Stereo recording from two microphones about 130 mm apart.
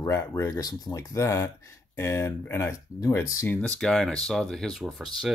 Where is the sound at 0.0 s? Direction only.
25° left (ahead or behind).